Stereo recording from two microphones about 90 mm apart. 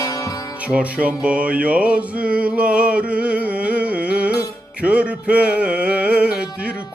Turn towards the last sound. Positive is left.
turn(degrees=-15)  # may be behind; listen again after turning